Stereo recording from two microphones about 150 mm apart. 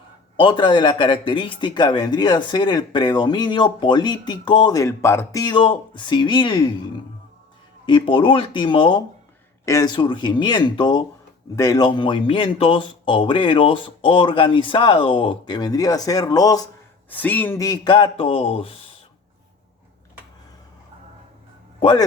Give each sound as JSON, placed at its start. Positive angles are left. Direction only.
{"t": 0.3, "sound": "speech", "side_deg": 30}
{"t": 9.6, "sound": "speech", "side_deg": 20}
{"t": 9.9, "sound": "speech", "side_deg": 30}
{"t": 17.1, "sound": "speech", "side_deg": 10}
{"t": 17.6, "sound": "speech", "side_deg": 30}
{"t": 21.8, "sound": "a man's voice", "side_deg": 30}